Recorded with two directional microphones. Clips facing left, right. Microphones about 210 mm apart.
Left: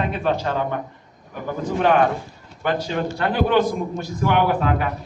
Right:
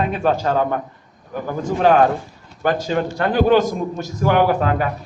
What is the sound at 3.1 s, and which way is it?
A man's voice, 45° right (ahead or behind).